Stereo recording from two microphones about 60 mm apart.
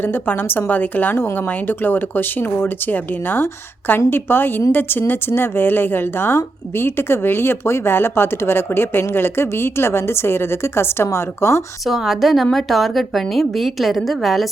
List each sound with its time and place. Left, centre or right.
0.0 s a woman's voice: left
11.9 s a woman's voice: centre